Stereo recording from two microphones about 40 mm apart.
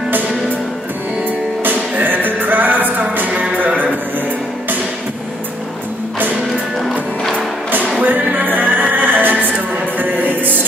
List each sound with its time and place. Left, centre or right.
1.6 s music: right
8.0 s music: right